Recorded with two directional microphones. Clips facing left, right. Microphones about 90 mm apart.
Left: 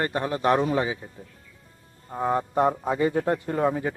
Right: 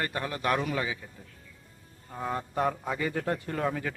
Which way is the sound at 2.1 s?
30° left (ahead or behind).